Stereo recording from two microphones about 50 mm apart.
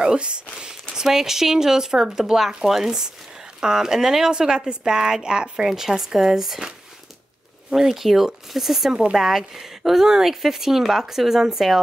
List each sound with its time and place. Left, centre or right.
0.0 s speech: centre
7.7 s speech: centre